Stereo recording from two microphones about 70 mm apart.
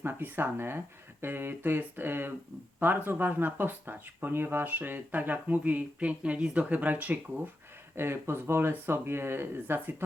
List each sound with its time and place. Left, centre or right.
0.0 s speech: right
7.9 s speech: right